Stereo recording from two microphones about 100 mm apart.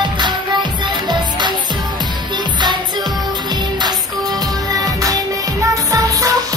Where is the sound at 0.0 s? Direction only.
50° right (ahead or behind).